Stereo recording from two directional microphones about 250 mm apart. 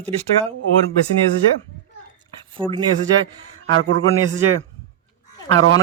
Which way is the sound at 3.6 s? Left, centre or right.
Right.